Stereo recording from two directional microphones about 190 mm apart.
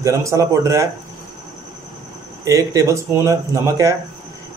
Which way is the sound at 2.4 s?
15° right (ahead or behind).